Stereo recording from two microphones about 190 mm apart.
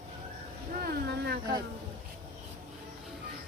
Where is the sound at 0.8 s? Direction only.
55° right (ahead or behind).